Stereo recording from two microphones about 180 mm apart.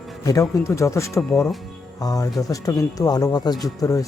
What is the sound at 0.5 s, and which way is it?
Speech, 15° left (ahead or behind).